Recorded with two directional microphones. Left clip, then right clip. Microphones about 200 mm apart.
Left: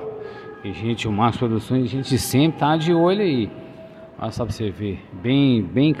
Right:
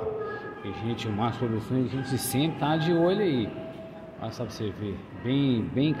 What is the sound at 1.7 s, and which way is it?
Speech, 50° left (ahead or behind).